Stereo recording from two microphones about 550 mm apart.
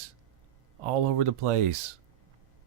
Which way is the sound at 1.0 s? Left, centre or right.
Right.